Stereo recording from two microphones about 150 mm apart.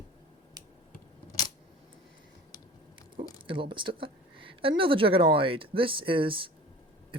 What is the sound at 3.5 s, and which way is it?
Speech, 35° right (ahead or behind).